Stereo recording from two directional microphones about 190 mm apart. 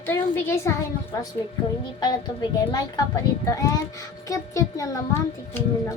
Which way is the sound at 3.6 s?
15° left (ahead or behind).